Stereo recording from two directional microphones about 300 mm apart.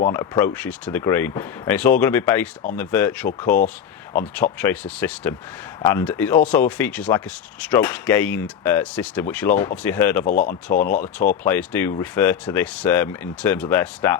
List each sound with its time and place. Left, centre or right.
0.1 s speech: centre
4.6 s speech: centre
10.2 s speech: left
11.2 s speech: centre